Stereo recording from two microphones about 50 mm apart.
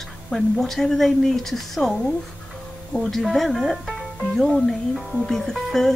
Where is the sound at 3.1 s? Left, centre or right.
Centre.